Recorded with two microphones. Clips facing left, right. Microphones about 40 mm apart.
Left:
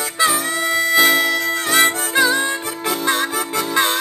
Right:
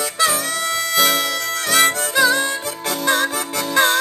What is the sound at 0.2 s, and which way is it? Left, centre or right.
Harmonica, centre.